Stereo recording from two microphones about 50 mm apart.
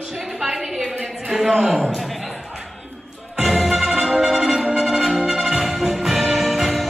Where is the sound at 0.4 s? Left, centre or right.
Centre.